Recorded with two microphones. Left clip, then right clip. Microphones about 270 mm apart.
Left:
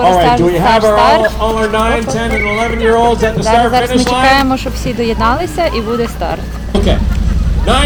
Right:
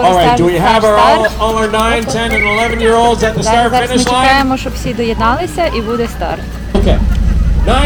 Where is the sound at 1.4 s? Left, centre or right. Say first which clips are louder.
Right 1 dB; right.